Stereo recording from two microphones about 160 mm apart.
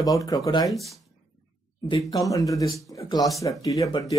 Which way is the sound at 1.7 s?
30° left (ahead or behind).